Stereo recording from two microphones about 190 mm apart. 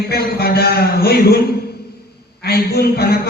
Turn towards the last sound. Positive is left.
turn(degrees=55)  # may be behind; listen again after turning